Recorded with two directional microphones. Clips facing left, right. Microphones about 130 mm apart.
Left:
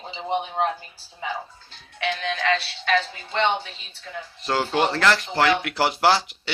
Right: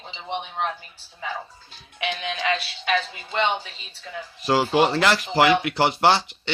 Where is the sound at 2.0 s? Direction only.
15° right (ahead or behind).